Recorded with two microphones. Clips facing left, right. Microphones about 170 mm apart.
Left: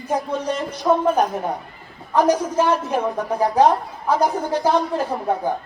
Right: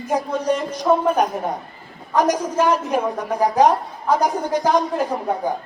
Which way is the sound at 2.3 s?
10° right (ahead or behind).